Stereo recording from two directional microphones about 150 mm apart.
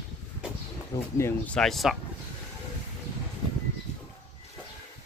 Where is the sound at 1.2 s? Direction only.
5° left (ahead or behind).